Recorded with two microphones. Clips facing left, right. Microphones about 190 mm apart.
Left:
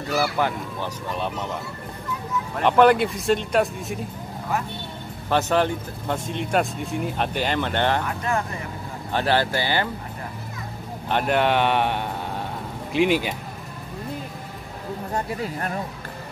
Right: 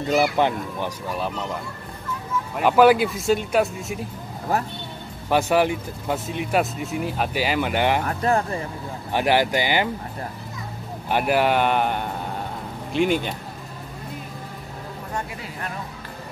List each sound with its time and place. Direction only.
0.0 s speech: 20° right (ahead or behind); by 4.0 s centre (ahead or behind)
5.3 s speech: 10° right (ahead or behind)
8.1 s speech: 35° right (ahead or behind)
9.1 s speech: 15° right (ahead or behind)
11.1 s speech: 5° right (ahead or behind)
15.1 s speech: 40° left (ahead or behind)